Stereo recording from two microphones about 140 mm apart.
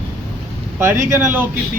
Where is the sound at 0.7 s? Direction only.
20° right (ahead or behind).